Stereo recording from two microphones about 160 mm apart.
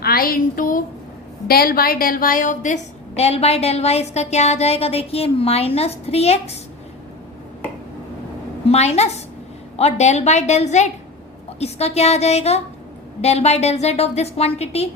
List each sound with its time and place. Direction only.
0.0 s speech: 70° left (ahead or behind)
1.5 s a woman's voice: 70° left (ahead or behind); by 2.7 s 50° left (ahead or behind)
3.2 s a woman's voice: 40° left (ahead or behind)
8.6 s a woman's voice: 40° left (ahead or behind)